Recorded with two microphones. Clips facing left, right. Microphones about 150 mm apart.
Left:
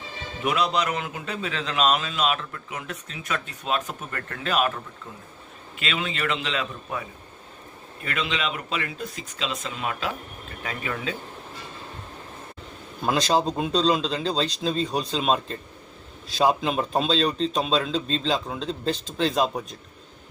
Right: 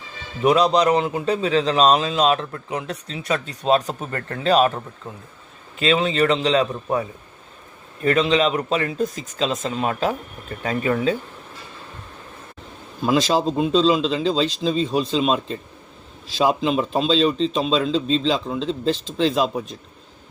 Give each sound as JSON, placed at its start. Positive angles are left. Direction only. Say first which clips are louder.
{"t": 0.4, "sound": "a man's voice", "louder": "right 8 dB", "side_deg": -35}
{"t": 5.8, "sound": "a man's voice", "louder": "right 10 dB", "side_deg": -35}
{"t": 8.0, "sound": "a man's voice", "louder": "right 11 dB", "side_deg": -35}
{"t": 13.1, "sound": "speech", "louder": "right 3 dB", "side_deg": -5}